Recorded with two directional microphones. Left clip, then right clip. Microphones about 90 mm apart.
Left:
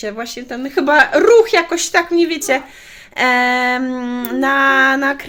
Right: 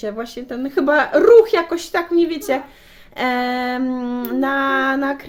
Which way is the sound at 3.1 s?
10° right (ahead or behind).